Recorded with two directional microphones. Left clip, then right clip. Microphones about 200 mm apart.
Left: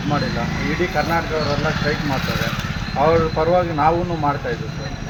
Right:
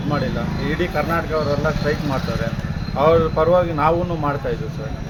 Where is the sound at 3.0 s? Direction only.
15° right (ahead or behind).